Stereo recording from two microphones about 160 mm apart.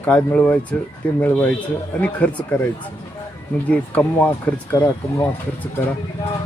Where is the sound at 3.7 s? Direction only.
10° left (ahead or behind).